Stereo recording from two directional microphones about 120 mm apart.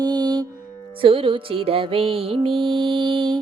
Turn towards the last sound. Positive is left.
turn(degrees=-40)  # may be behind; listen again after turning